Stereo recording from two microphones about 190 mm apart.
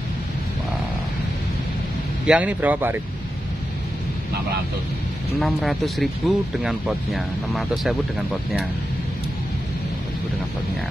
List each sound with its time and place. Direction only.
2.2 s speech: 5° right (ahead or behind)
5.4 s speech: centre (ahead or behind)